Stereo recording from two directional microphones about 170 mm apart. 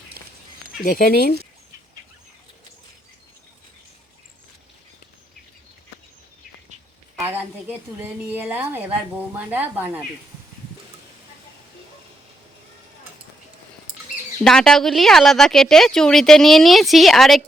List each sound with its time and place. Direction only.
0.8 s speech: 60° left (ahead or behind)
7.2 s a woman's voice: 10° right (ahead or behind)
14.4 s speech: 5° left (ahead or behind)